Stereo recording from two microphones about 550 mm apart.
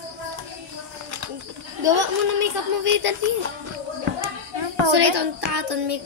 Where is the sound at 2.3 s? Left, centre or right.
Right.